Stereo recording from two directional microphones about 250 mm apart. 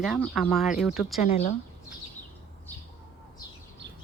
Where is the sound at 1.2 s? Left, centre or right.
Left.